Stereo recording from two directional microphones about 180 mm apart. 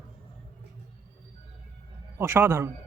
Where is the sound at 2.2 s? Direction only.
10° right (ahead or behind).